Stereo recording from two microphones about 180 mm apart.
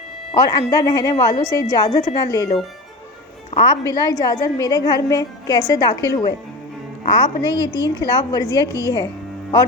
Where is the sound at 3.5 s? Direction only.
30° left (ahead or behind).